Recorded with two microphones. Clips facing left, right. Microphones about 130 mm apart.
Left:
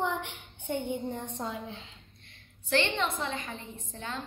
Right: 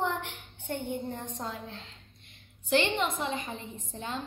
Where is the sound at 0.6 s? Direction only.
Centre (ahead or behind).